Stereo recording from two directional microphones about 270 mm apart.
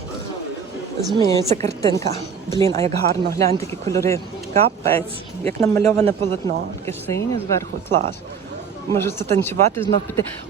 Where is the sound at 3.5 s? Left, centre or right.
Centre.